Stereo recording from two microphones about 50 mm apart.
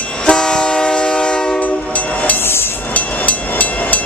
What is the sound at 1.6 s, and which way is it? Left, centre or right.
Train, left.